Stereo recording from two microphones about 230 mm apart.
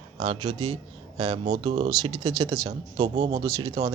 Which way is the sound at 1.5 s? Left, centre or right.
Right.